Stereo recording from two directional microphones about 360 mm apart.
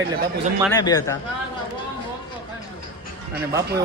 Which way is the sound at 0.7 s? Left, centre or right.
Centre.